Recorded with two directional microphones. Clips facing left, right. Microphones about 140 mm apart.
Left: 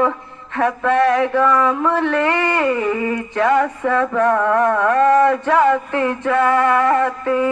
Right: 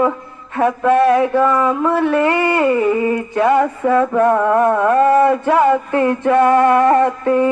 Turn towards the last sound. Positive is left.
turn(degrees=-20)  # may be behind; listen again after turning